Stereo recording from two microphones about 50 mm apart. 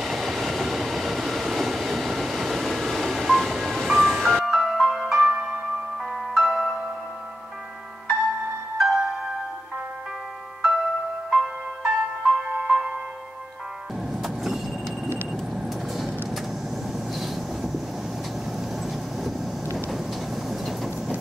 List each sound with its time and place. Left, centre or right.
0.0 s train: centre
5.3 s music: right
6.3 s music: centre
8.7 s music: centre
10.6 s music: centre
14.1 s vehicle: centre
17.1 s train: centre
20.4 s train: centre